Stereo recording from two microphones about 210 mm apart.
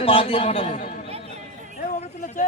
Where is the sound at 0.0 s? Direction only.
25° left (ahead or behind).